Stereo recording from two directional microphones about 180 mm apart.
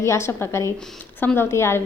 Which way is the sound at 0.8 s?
5° left (ahead or behind).